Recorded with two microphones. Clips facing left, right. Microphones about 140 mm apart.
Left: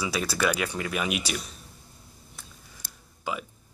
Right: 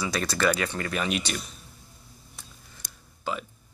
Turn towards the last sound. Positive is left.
turn(degrees=10)  # may be behind; listen again after turning